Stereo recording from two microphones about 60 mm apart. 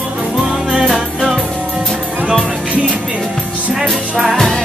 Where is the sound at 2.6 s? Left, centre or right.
Right.